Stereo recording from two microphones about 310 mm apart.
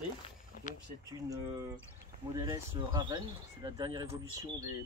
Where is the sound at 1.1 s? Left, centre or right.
Centre.